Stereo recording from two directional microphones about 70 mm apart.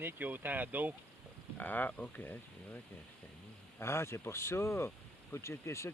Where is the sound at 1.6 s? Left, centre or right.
Left.